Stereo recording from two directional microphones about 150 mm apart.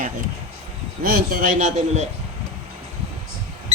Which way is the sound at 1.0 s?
80° right.